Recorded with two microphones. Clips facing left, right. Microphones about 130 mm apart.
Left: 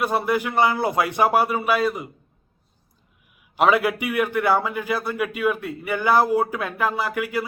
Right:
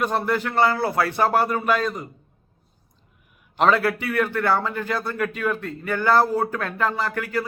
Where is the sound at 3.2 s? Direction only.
5° left (ahead or behind).